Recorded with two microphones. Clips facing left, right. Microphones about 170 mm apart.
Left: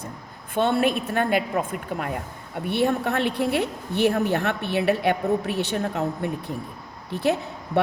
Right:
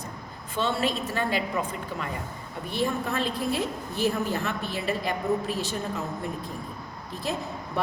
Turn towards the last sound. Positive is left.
turn(degrees=70)  # may be behind; listen again after turning